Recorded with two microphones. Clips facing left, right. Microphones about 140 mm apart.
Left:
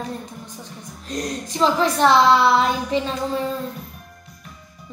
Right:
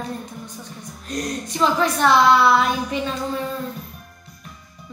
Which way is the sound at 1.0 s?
25° left (ahead or behind).